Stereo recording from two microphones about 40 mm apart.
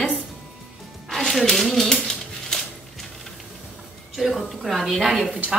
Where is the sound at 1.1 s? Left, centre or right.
Centre.